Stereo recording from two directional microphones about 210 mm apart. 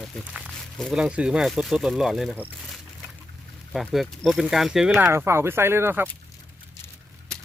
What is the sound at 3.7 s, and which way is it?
Speech, centre (ahead or behind).